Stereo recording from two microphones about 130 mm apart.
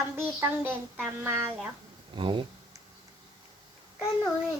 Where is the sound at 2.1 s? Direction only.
40° right (ahead or behind).